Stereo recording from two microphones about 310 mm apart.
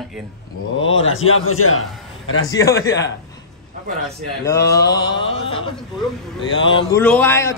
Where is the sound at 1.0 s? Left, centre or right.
Left.